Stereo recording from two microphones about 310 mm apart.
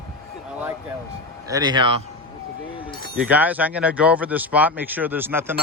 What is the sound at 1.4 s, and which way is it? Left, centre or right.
Speech, centre.